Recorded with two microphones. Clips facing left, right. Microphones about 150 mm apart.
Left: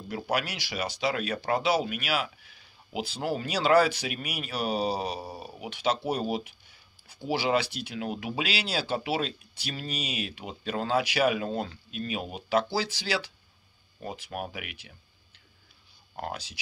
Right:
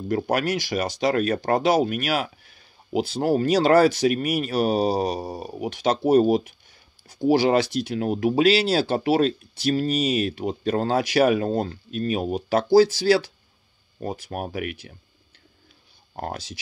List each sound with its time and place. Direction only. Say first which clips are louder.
0.1 s speech: right 8 dB; 45° right (ahead or behind)
16.2 s speech: right 4 dB; 45° right (ahead or behind)